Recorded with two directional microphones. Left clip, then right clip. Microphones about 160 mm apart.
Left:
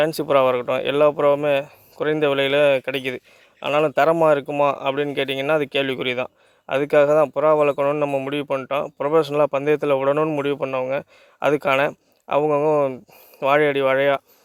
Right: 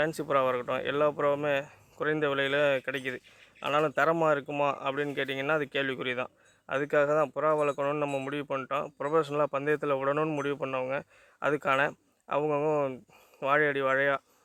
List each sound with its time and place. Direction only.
0.0 s speech: 45° left (ahead or behind)
13.4 s speech: 50° left (ahead or behind)